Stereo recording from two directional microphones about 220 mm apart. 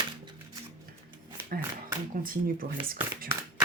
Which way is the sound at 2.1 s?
40° right (ahead or behind).